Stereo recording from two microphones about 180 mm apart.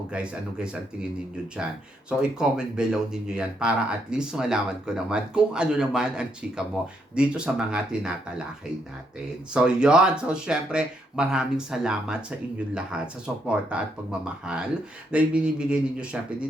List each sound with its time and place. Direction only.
0.1 s speech: 5° right (ahead or behind)
9.5 s speech: 5° right (ahead or behind)